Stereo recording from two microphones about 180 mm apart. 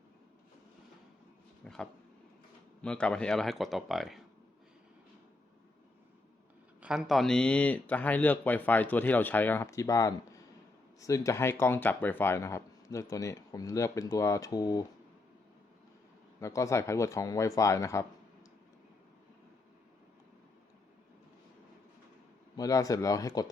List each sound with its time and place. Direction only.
1.6 s a sound: 5° left (ahead or behind)
2.8 s speech: 5° left (ahead or behind)
6.8 s speech: centre (ahead or behind); by 14.8 s 20° left (ahead or behind)
16.4 s speech: 15° left (ahead or behind)
22.5 s speech: 20° left (ahead or behind)